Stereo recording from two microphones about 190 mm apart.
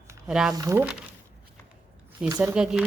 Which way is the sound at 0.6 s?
15° right (ahead or behind).